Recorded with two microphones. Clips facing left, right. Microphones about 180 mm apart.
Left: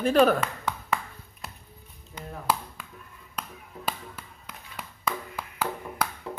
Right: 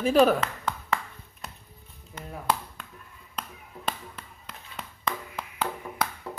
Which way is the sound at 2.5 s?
5° left (ahead or behind).